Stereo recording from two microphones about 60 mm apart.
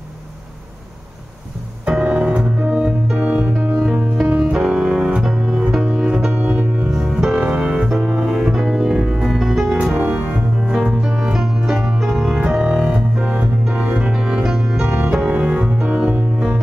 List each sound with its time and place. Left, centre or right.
1.9 s piano: centre
3.8 s music: centre
9.9 s organ: right
10.7 s music: centre
12.4 s keyboard: centre
14.1 s music: centre